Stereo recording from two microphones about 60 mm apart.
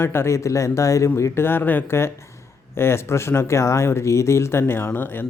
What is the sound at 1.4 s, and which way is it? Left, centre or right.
A man's voice, left.